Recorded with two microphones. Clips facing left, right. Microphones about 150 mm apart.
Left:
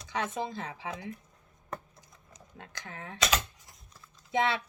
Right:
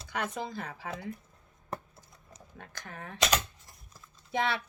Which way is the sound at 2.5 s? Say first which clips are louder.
Even; 20° left (ahead or behind).